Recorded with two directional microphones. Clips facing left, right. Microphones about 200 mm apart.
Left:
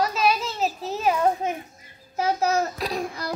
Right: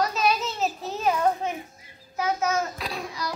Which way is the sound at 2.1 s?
35° left (ahead or behind).